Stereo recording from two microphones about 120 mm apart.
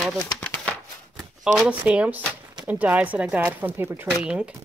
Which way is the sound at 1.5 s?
10° right (ahead or behind).